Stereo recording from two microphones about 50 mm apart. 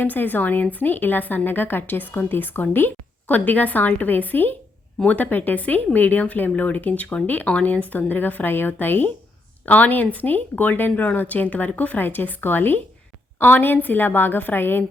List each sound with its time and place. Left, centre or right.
0.0 s a woman's voice: left